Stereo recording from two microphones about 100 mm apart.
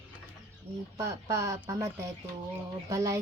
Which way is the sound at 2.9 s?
30° right (ahead or behind).